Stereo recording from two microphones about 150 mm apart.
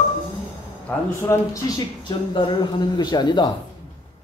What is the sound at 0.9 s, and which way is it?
Speech, 10° left (ahead or behind).